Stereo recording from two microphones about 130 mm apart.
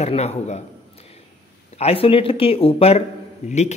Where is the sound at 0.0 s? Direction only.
55° left (ahead or behind).